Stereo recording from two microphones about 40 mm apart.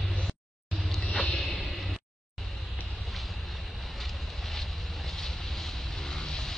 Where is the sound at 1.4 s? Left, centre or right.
Centre.